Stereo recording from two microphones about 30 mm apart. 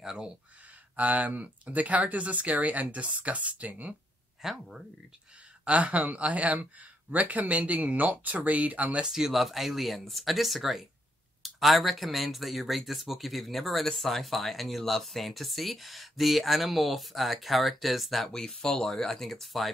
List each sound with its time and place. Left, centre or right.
0.9 s speech: right
4.4 s speech: centre
5.7 s speech: right
8.5 s speech: right
9.0 s speech: centre
18.3 s speech: centre